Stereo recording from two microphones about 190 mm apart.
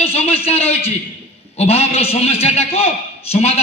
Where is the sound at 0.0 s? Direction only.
30° left (ahead or behind).